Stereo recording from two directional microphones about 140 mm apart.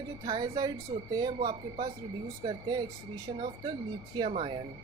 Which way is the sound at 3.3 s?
40° right (ahead or behind).